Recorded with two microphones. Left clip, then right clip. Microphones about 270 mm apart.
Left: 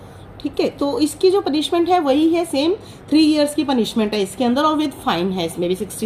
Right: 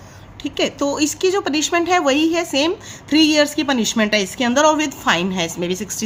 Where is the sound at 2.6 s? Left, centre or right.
Right.